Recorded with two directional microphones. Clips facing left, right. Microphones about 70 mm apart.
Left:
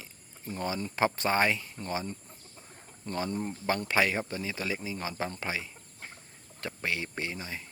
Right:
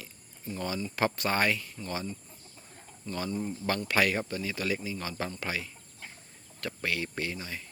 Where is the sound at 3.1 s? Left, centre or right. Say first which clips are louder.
Left 2 dB; left.